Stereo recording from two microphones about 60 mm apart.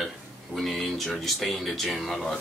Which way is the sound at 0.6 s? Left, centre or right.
Centre.